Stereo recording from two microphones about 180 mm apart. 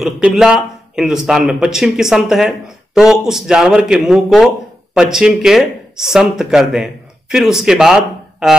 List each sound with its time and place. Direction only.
0.0 s speech: centre (ahead or behind)